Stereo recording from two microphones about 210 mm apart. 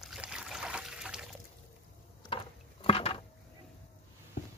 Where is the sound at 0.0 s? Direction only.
5° right (ahead or behind).